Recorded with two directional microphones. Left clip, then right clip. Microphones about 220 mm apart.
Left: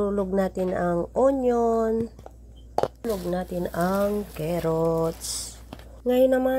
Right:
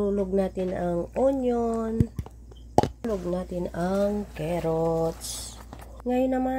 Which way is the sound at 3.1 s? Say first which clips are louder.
Left 2 dB; 15° left (ahead or behind).